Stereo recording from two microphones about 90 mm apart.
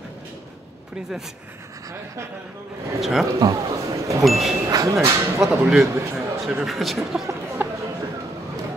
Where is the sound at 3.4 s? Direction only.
45° right (ahead or behind).